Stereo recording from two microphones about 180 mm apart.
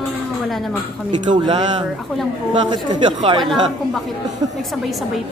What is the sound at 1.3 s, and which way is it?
Speech, 25° right (ahead or behind).